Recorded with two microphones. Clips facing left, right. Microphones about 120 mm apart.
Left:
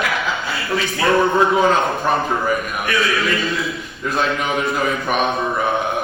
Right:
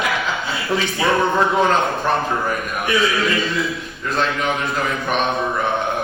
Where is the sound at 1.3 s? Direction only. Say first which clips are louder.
Left 2 dB; centre (ahead or behind).